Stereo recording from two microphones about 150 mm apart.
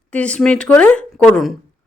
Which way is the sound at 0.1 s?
10° left (ahead or behind).